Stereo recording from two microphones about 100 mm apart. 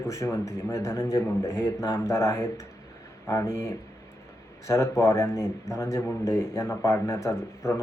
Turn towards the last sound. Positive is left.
turn(degrees=30)  # may be behind; listen again after turning